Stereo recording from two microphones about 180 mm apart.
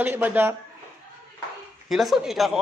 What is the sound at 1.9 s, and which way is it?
Speech, centre (ahead or behind).